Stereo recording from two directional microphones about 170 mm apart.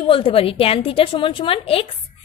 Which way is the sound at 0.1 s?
30° left (ahead or behind).